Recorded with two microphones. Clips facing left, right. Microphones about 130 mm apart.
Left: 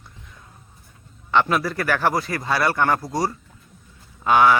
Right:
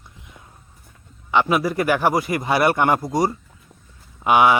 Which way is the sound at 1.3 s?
10° right (ahead or behind).